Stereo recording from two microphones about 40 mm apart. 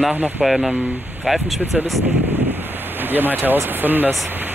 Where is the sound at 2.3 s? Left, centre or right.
Right.